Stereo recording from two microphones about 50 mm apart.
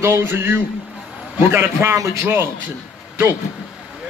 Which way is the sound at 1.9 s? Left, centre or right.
Right.